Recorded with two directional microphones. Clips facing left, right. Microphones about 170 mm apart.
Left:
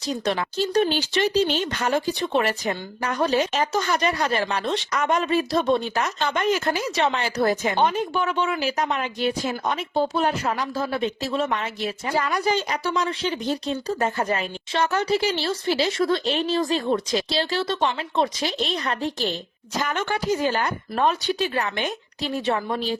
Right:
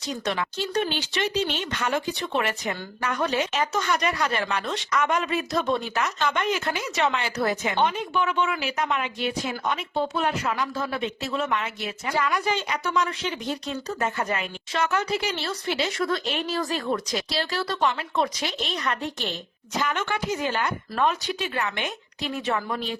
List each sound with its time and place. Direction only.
0.1 s speech: 35° left (ahead or behind)